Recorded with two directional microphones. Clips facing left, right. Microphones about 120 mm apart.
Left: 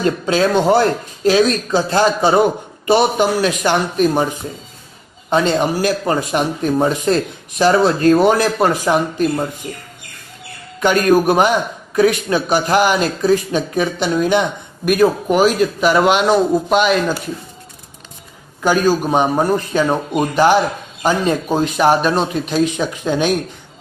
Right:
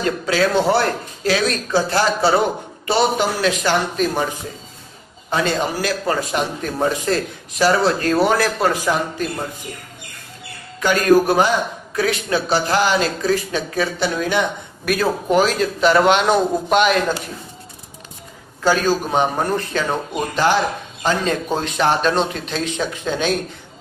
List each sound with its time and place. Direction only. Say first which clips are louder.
0.3 s speech: left 3 dB; 20° left (ahead or behind)
5.3 s speech: left 5 dB; 20° left (ahead or behind)
10.8 s speech: left 1 dB; 20° left (ahead or behind); by 17.2 s centre (ahead or behind)
18.6 s speech: left 3 dB; 15° left (ahead or behind)